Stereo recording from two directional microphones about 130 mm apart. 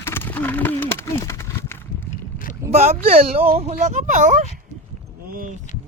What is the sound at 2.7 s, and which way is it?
Speech, 55° right (ahead or behind).